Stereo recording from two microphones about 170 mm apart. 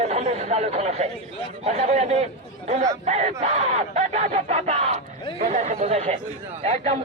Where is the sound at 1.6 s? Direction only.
40° right (ahead or behind).